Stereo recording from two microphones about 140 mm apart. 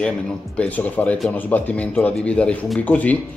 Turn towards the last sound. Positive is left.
turn(degrees=10)  # may be behind; listen again after turning